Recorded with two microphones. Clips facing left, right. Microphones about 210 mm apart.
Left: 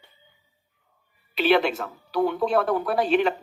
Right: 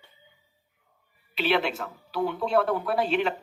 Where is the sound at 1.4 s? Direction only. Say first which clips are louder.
Left 5 dB; 45° left (ahead or behind).